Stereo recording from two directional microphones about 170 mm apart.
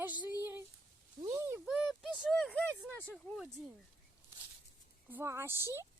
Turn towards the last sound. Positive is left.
turn(degrees=-15)  # may be behind; listen again after turning